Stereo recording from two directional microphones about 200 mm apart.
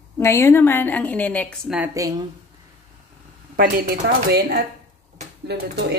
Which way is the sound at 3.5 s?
45° right (ahead or behind).